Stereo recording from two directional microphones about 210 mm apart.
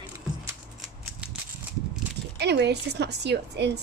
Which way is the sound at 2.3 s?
50° right (ahead or behind).